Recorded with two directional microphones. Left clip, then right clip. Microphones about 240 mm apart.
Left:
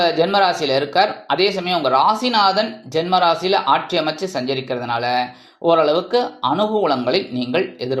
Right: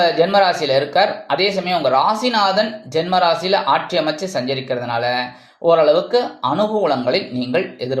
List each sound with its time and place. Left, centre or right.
0.0 s speech: centre